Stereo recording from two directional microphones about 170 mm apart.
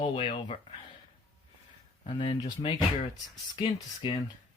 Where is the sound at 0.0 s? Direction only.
35° left (ahead or behind).